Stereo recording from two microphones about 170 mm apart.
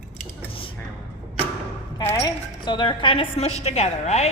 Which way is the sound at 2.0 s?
15° left (ahead or behind).